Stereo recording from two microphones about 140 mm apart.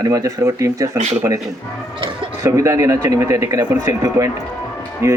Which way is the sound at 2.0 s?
40° right (ahead or behind).